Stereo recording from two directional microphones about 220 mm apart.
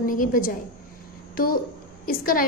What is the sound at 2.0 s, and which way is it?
Speech, 40° left (ahead or behind).